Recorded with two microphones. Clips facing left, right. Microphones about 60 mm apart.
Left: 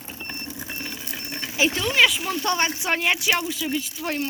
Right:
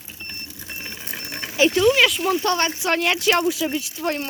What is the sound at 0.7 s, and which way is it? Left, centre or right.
Vehicle, centre.